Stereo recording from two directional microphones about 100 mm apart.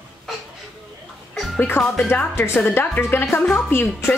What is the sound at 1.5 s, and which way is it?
Speech, 20° left (ahead or behind).